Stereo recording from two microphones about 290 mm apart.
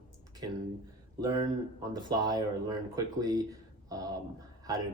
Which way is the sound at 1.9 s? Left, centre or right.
Centre.